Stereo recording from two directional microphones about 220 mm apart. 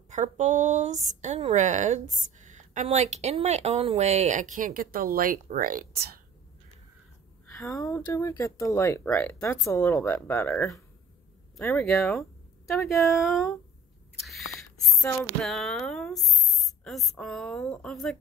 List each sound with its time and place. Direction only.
0.1 s a woman's voice: 35° right (ahead or behind)
7.7 s a woman's voice: 15° left (ahead or behind)